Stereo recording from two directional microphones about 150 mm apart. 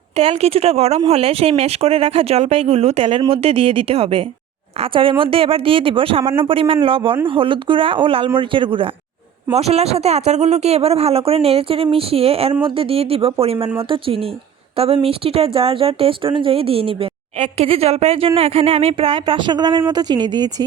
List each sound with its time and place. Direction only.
0.2 s speech: 40° right (ahead or behind)